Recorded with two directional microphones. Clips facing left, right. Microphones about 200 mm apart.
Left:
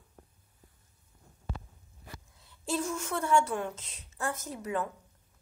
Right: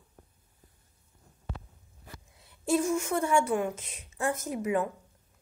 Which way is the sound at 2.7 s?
15° right (ahead or behind).